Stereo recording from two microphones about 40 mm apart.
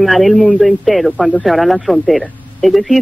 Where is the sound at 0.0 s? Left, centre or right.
Centre.